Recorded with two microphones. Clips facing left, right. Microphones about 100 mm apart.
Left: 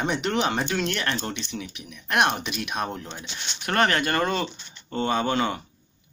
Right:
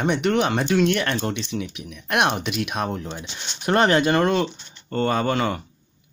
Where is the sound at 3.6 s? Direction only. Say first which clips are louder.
Right 5 dB; 25° right (ahead or behind).